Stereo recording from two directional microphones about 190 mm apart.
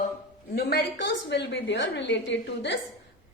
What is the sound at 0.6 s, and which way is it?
A woman's voice, 60° left (ahead or behind).